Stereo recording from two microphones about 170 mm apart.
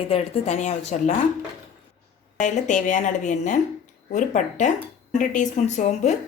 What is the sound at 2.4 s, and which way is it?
A woman's voice, 45° left (ahead or behind).